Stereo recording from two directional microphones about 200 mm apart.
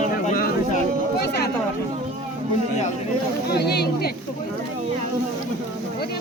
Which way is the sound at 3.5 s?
55° left (ahead or behind).